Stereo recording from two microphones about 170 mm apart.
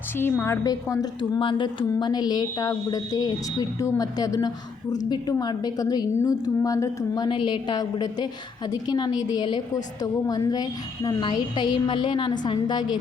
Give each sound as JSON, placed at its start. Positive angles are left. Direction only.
{"t": 0.2, "sound": "a woman's voice", "side_deg": 10}
{"t": 1.4, "sound": "a woman's voice", "side_deg": 30}